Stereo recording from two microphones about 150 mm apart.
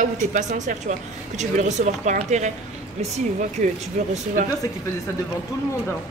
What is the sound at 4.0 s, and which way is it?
Speech, 55° right (ahead or behind).